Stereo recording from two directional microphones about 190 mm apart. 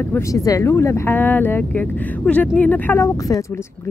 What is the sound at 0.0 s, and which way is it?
A woman's voice, 15° left (ahead or behind).